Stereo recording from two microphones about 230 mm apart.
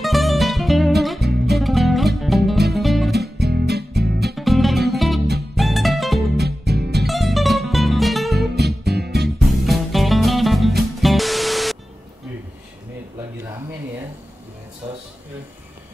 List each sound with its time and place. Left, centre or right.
0.0 s music: centre
3.3 s music: right
4.4 s music: centre
6.3 s music: right
7.1 s music: centre
8.5 s music: right
9.4 s music: centre